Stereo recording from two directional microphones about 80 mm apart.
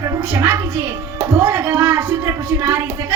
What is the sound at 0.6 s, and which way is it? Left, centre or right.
A child's voice, right.